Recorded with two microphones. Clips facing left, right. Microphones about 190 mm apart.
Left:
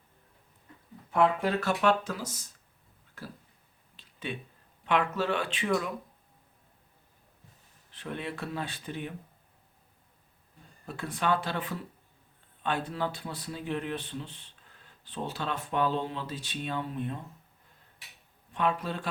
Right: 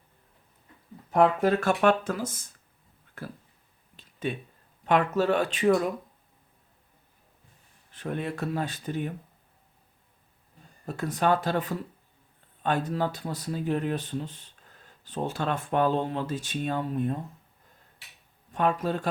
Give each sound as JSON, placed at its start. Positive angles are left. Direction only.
{"t": 1.1, "sound": "speech", "side_deg": -40}
{"t": 3.2, "sound": "a sound", "side_deg": -55}
{"t": 3.9, "sound": "a sound", "side_deg": -45}
{"t": 4.9, "sound": "speech", "side_deg": -45}
{"t": 7.9, "sound": "speech", "side_deg": -45}
{"t": 10.8, "sound": "speech", "side_deg": -40}
{"t": 18.5, "sound": "speech", "side_deg": -45}